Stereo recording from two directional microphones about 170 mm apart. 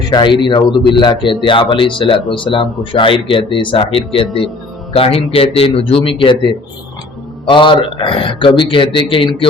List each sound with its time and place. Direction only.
0.1 s a man's voice: 25° left (ahead or behind)